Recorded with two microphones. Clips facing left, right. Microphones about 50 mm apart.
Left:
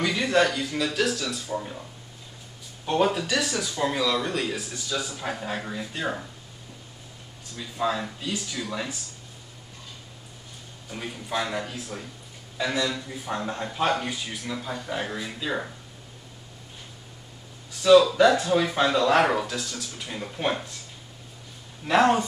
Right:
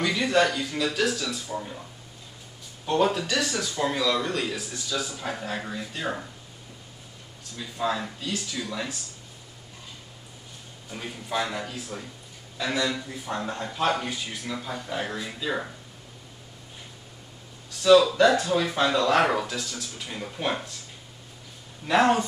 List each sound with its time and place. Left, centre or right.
0.0 s speech: centre
3.1 s speech: centre
7.5 s speech: centre
10.9 s speech: centre
13.3 s speech: centre
13.9 s speech: centre
17.8 s speech: centre
21.8 s speech: centre